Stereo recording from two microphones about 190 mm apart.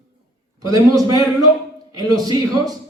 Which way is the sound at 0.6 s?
20° right (ahead or behind).